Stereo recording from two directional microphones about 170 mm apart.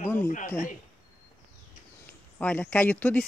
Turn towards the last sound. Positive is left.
turn(degrees=10)  # may be behind; listen again after turning